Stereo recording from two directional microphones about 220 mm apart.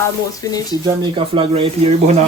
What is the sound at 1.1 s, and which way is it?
Speech, 25° right (ahead or behind).